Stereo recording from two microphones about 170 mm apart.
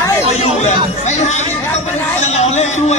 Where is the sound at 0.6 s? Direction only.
40° left (ahead or behind).